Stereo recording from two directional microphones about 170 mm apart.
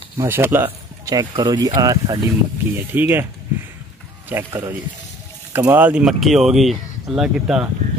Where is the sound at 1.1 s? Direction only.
25° right (ahead or behind).